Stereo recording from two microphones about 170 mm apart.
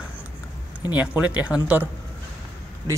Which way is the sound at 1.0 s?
10° right (ahead or behind).